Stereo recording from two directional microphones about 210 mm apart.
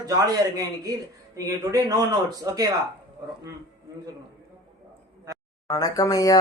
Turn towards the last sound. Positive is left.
turn(degrees=15)  # may be behind; listen again after turning